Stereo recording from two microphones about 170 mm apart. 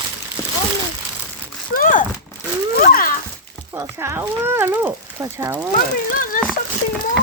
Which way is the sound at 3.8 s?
15° right (ahead or behind).